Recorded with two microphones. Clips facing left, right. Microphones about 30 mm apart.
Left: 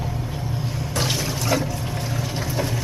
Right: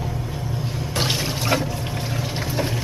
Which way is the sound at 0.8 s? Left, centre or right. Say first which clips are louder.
Right 1 dB; right.